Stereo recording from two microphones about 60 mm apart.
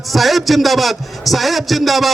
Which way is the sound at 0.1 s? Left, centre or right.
Centre.